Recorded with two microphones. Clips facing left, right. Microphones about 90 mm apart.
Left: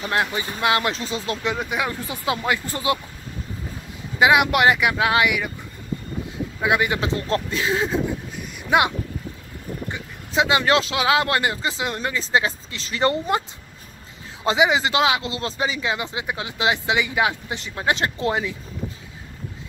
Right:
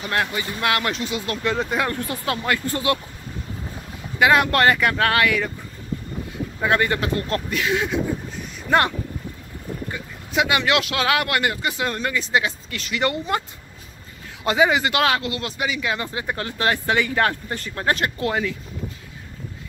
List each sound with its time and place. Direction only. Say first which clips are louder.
0.0 s speech: left 1 dB; 20° left (ahead or behind)
1.5 s speech: right 4 dB; 5° left (ahead or behind); by 3.0 s 25° left (ahead or behind)
4.2 s speech: even; 15° left (ahead or behind)
6.6 s speech: right 1 dB; 10° left (ahead or behind); by 8.0 s 30° left (ahead or behind)
8.6 s speech: even; 10° left (ahead or behind)
9.8 s speech: even; 25° left (ahead or behind)
14.4 s speech: even; 20° left (ahead or behind)
15.2 s speech: left 1 dB; 25° left (ahead or behind)